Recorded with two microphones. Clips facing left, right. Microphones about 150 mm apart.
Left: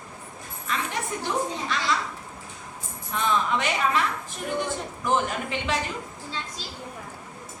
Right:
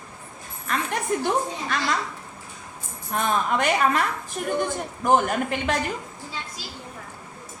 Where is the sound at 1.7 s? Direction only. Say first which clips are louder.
Right 5 dB; 50° right (ahead or behind).